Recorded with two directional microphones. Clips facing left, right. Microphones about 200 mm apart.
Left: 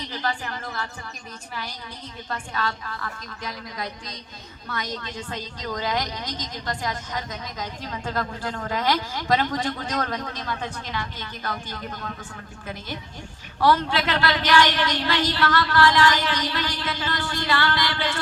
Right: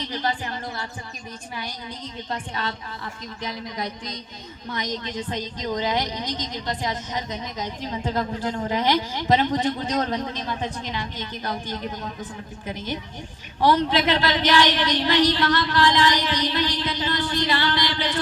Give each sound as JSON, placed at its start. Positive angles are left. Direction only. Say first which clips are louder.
{"t": 0.1, "sound": "speech", "louder": "right 1 dB", "side_deg": -20}
{"t": 2.3, "sound": "a woman's voice", "louder": "left 1 dB", "side_deg": -20}